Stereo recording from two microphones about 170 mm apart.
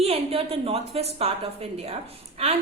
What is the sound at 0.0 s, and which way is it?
A woman's voice, 35° right (ahead or behind).